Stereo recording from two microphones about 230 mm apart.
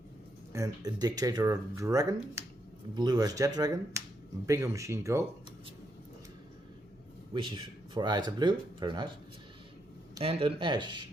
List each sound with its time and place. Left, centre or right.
0.5 s speech: centre
7.3 s speech: centre
10.2 s speech: right